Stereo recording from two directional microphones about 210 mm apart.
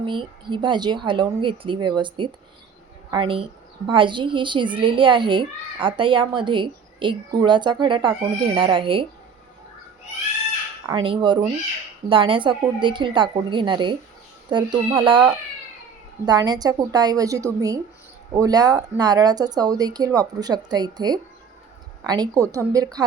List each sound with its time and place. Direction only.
0.0 s a child's voice: 20° right (ahead or behind)
10.8 s a child's voice: 25° right (ahead or behind)
15.0 s a child's voice: 25° right (ahead or behind)